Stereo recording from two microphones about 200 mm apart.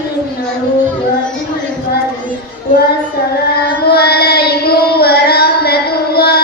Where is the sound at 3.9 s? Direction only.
50° left (ahead or behind).